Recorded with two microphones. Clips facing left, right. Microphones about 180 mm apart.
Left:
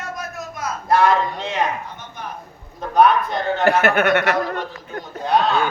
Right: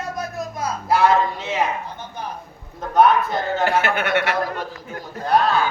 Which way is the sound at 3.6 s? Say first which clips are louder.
Left 6 dB; 45° left (ahead or behind).